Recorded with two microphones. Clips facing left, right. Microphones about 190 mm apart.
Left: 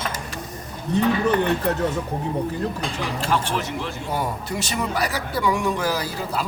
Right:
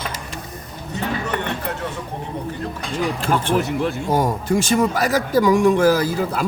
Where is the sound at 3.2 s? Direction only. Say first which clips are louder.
Right 3 dB; 55° right (ahead or behind).